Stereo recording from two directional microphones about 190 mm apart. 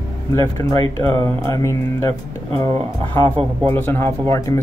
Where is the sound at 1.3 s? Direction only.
15° left (ahead or behind).